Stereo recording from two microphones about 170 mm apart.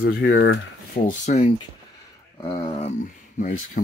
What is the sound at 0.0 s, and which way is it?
Speech, 75° left (ahead or behind).